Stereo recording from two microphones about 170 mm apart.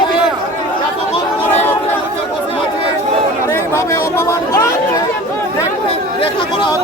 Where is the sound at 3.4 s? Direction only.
15° left (ahead or behind).